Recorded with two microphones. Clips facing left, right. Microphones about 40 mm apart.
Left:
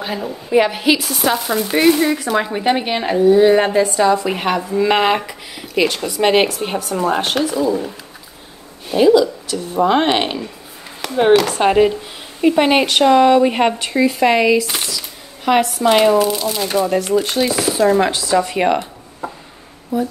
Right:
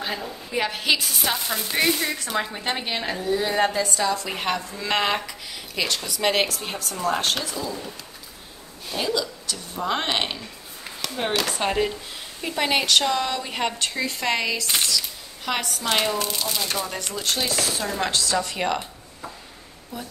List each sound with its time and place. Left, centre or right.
0.6 s speech: centre
0.9 s a sound: centre
1.8 s a woman's voice: centre
8.9 s a woman's voice: centre
13.7 s speech: centre
14.7 s a sound: centre
15.0 s speech: centre
19.9 s speech: centre